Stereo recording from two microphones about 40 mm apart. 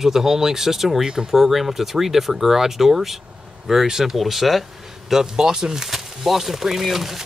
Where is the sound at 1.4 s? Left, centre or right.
Centre.